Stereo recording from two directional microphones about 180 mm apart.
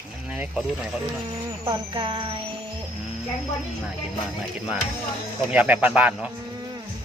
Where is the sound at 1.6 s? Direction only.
25° right (ahead or behind).